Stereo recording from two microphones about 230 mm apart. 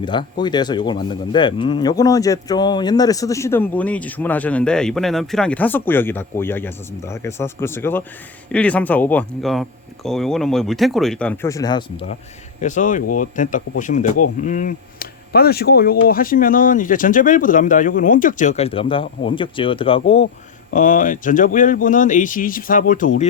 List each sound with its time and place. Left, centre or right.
0.0 s speech: centre
12.6 s speech: left
20.7 s speech: left